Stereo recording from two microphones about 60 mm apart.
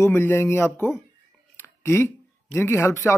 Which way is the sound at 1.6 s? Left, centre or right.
Left.